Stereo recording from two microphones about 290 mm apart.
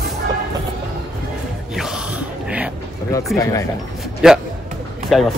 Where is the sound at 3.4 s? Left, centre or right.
Centre.